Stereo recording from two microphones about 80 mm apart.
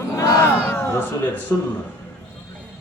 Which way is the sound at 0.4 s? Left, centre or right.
Left.